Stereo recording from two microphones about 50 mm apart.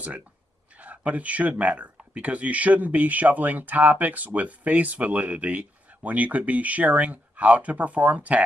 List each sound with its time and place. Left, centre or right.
0.7 s speech: right